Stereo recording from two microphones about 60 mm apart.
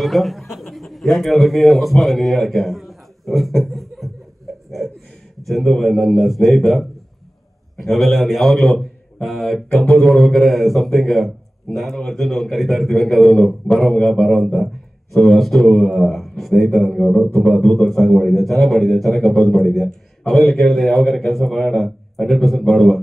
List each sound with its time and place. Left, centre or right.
0.0 s a man's voice: centre
4.6 s a sound: centre
5.5 s a man's voice: centre
15.1 s a man's voice: centre
17.3 s speech: left
17.6 s a man's voice: centre